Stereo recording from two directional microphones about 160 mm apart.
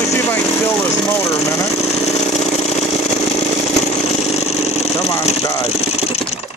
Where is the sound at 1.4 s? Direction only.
20° left (ahead or behind).